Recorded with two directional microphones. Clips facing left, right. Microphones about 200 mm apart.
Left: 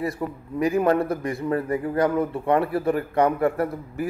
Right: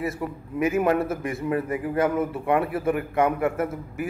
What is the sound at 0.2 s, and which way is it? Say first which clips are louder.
A man's voice: left 1 dB; 5° right (ahead or behind).